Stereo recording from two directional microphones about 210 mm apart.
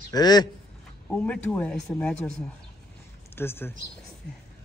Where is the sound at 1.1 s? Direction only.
5° left (ahead or behind).